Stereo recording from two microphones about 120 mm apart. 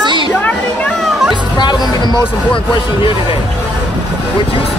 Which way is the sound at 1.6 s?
40° left (ahead or behind).